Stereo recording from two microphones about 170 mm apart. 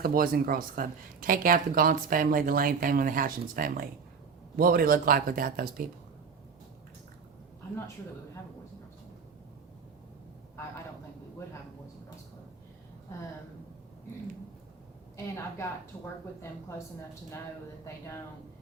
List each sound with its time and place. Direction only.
0.0 s speech: 60° right (ahead or behind)
15.1 s a woman's voice: 15° left (ahead or behind)